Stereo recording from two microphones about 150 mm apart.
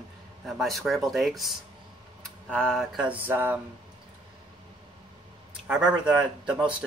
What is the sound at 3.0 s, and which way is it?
Speech, 10° right (ahead or behind).